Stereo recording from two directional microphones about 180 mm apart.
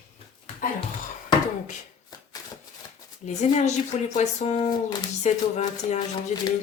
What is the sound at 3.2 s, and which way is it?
Speech, 40° left (ahead or behind).